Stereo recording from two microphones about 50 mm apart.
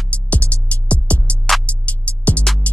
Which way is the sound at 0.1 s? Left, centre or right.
Left.